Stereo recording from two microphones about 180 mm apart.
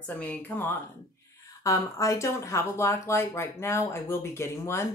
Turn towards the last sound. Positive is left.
turn(degrees=15)  # may be behind; listen again after turning